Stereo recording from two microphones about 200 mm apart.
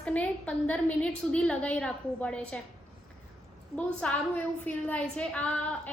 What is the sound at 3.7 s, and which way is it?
A woman's voice, 5° left (ahead or behind).